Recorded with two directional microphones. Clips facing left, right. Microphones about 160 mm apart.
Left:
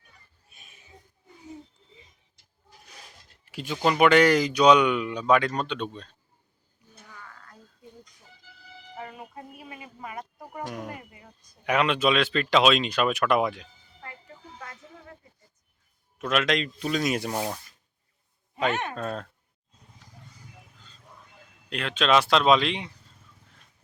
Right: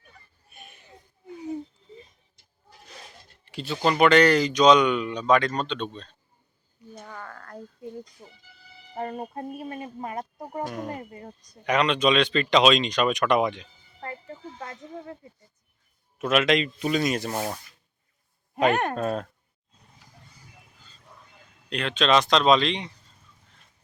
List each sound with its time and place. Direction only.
0.5 s a sound: 65° right (ahead or behind)
3.4 s speech: 10° left (ahead or behind)
7.0 s a sound: 60° right (ahead or behind)
8.2 s speech: 55° right (ahead or behind)
10.3 s speech: 20° right (ahead or behind)
10.8 s speech: 40° right (ahead or behind)
11.6 s speech: 5° left (ahead or behind)
14.6 s a sound: 30° right (ahead or behind)
16.1 s speech: 5° right (ahead or behind)
17.1 s speech: 10° left (ahead or behind)
18.7 s speech: 60° right (ahead or behind)
18.9 s speech: 10° right (ahead or behind)
21.7 s speech: 5° left (ahead or behind)